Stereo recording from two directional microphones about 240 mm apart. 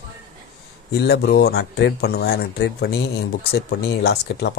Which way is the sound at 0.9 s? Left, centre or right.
Left.